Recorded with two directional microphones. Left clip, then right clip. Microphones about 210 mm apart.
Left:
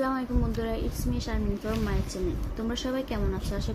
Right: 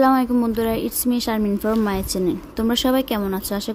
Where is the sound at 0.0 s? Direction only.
55° right (ahead or behind).